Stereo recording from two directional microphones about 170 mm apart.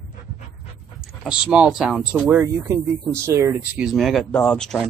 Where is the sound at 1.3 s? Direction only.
5° right (ahead or behind).